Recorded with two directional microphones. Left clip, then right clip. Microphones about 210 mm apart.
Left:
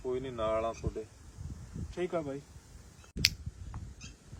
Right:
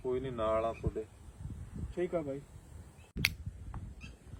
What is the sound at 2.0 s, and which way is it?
Speech, 15° left (ahead or behind).